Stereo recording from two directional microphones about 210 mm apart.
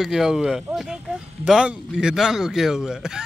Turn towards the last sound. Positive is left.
turn(degrees=-5)  # may be behind; listen again after turning